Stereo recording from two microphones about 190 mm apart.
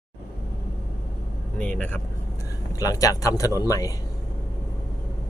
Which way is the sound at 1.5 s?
5° left (ahead or behind).